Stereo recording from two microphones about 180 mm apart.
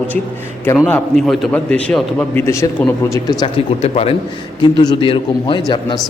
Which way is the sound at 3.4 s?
35° left (ahead or behind).